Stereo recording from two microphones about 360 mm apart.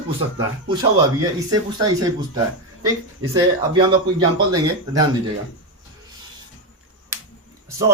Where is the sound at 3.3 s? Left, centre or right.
Centre.